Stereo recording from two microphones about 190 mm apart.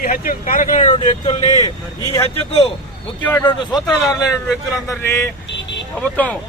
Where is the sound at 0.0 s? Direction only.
45° left (ahead or behind); by 2.7 s 30° left (ahead or behind).